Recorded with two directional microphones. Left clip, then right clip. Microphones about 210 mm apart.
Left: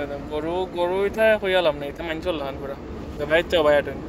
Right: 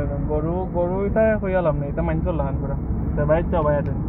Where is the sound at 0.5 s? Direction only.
25° left (ahead or behind).